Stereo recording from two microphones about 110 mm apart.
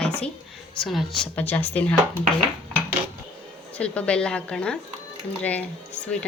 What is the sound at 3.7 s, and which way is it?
Speech, 10° left (ahead or behind).